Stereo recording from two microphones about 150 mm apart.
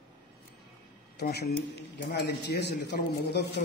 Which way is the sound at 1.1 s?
90° left.